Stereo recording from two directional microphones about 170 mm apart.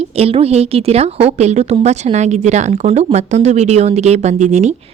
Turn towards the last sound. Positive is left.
turn(degrees=-40)  # may be behind; listen again after turning